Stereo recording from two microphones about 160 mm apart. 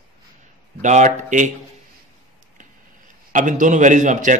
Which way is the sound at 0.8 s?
50° right (ahead or behind).